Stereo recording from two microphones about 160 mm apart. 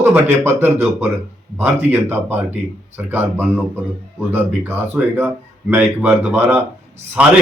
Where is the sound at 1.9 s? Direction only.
15° right (ahead or behind).